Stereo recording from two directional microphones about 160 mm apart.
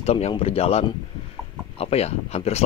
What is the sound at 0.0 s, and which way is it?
Speech, 40° left (ahead or behind).